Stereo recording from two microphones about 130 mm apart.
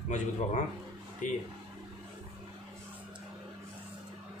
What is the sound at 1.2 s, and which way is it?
Speech, 80° left.